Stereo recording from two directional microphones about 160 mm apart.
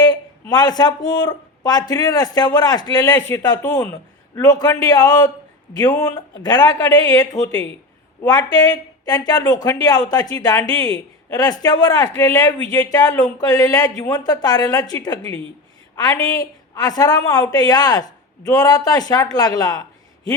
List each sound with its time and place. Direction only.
0.0 s a woman's voice: 25° left (ahead or behind)